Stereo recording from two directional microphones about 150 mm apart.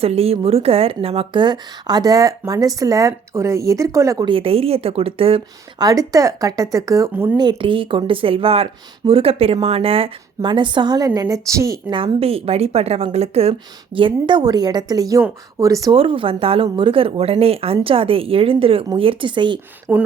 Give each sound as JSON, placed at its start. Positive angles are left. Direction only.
{"t": 0.0, "sound": "speech", "side_deg": -40}
{"t": 4.3, "sound": "speech", "side_deg": -40}
{"t": 5.8, "sound": "speech", "side_deg": -25}
{"t": 7.3, "sound": "speech", "side_deg": -30}
{"t": 11.9, "sound": "speech", "side_deg": -35}
{"t": 16.0, "sound": "speech", "side_deg": -35}
{"t": 19.9, "sound": "speech", "side_deg": -10}